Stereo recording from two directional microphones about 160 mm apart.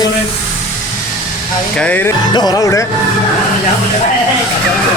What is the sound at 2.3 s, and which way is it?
Music, 25° left (ahead or behind).